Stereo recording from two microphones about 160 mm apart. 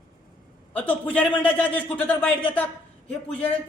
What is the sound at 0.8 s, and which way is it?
A man's voice, 10° left (ahead or behind).